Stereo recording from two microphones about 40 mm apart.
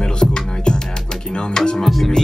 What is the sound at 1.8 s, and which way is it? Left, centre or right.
Music, centre.